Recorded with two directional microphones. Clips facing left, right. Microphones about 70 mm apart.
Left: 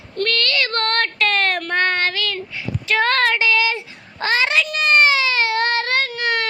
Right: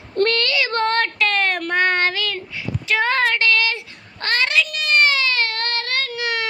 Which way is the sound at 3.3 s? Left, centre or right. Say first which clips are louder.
Left 1 dB; centre.